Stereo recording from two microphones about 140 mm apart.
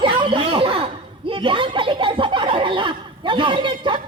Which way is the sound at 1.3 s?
40° right (ahead or behind).